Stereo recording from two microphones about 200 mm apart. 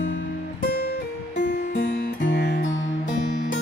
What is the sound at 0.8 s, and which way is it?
Music, 60° left (ahead or behind).